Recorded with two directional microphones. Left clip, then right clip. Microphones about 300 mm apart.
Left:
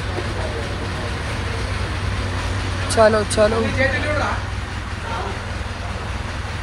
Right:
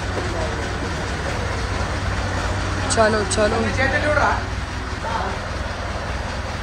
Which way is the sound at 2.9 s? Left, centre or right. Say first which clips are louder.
Left 3 dB; centre.